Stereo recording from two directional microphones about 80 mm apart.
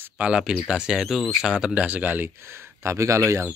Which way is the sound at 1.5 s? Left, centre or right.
Centre.